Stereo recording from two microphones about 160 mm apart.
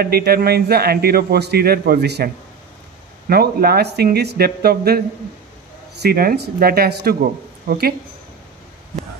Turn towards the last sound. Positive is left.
turn(degrees=-75)  # may be behind; listen again after turning